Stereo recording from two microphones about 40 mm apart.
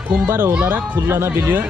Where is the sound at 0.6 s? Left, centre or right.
Right.